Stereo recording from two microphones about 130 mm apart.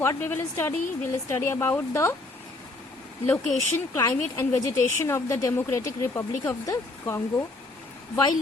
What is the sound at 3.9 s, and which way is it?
Speech, 25° left (ahead or behind).